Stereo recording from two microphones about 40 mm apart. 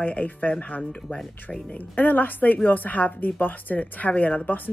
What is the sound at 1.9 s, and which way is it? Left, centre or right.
Speech, left.